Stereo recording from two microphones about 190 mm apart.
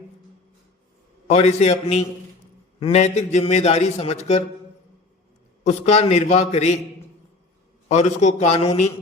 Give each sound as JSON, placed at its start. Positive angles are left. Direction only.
{"t": 1.3, "sound": "a man's voice", "side_deg": 35}
{"t": 5.6, "sound": "a man's voice", "side_deg": 35}
{"t": 7.9, "sound": "a man's voice", "side_deg": 35}